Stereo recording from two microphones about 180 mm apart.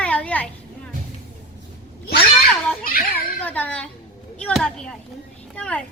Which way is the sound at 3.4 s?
10° left (ahead or behind).